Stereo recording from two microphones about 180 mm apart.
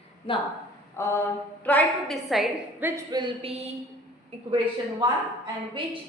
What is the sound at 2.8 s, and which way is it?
Speech, 15° right (ahead or behind).